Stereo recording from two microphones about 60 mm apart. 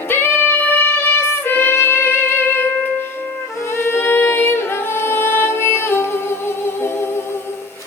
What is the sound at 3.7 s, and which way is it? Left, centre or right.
Singing, left.